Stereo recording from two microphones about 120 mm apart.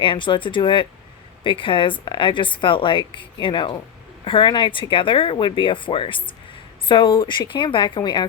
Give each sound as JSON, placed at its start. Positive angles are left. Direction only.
{"t": 0.0, "sound": "speech", "side_deg": 45}